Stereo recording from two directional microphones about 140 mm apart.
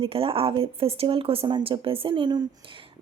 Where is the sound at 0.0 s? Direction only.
40° right (ahead or behind).